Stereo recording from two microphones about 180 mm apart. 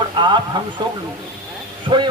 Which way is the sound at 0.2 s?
25° right (ahead or behind).